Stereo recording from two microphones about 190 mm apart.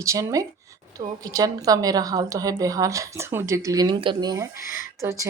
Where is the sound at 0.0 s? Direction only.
15° right (ahead or behind).